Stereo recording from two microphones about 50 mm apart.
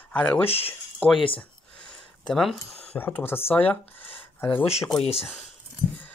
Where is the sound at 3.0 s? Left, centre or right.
Left.